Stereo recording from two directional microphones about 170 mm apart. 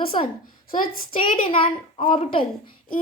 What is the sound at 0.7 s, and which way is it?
Child singing, 55° left (ahead or behind).